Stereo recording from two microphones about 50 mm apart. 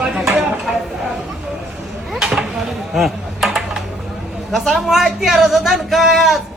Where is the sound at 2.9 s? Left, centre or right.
Centre.